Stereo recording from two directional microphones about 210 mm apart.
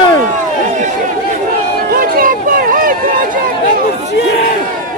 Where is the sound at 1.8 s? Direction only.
45° right (ahead or behind).